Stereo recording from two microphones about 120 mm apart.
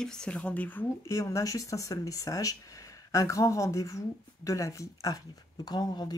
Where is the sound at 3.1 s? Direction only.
25° left (ahead or behind).